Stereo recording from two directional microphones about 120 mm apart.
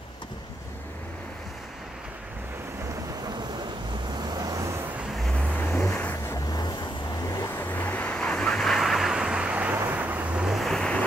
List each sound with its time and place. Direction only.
4.1 s vehicle: 35° right (ahead or behind)
5.9 s vehicle: 20° left (ahead or behind)
6.5 s vehicle: 35° left (ahead or behind); by 11.1 s 5° left (ahead or behind)